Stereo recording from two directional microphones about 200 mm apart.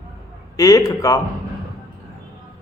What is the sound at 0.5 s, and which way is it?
Speech, 15° left (ahead or behind).